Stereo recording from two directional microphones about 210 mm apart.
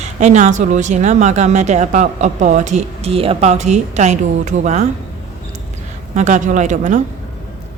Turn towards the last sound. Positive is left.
turn(degrees=-35)  # may be behind; listen again after turning